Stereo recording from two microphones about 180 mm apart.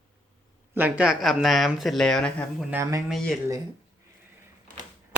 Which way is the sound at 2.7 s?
15° right (ahead or behind).